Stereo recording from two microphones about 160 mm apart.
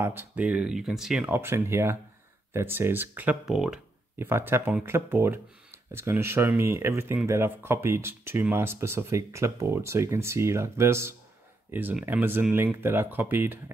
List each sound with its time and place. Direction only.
0.0 s speech: 15° right (ahead or behind)
4.2 s speech: 15° right (ahead or behind)